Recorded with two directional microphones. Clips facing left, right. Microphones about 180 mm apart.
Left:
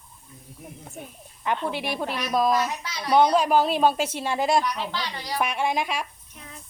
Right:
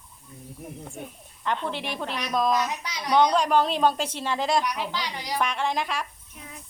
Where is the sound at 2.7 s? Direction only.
15° right (ahead or behind).